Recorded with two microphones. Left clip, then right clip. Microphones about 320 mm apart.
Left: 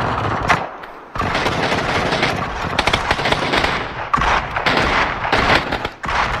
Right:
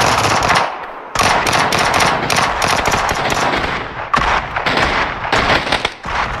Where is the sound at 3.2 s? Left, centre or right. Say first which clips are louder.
Right 1 dB; centre.